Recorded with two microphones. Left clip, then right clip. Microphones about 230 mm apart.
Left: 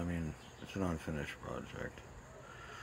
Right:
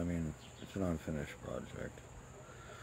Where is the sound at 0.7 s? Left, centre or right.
Centre.